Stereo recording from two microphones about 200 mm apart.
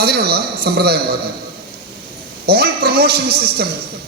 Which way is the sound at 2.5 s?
50° right (ahead or behind).